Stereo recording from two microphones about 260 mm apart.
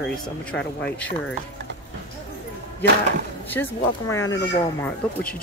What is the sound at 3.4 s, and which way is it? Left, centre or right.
Speech, centre.